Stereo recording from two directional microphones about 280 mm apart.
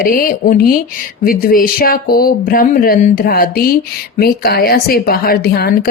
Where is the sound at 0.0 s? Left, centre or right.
Left.